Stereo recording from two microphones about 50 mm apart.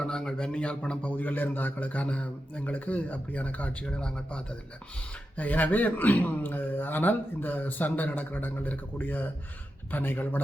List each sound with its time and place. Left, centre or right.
0.0 s a man's voice: centre
1.1 s speech: left; by 4.4 s centre
5.4 s speech: left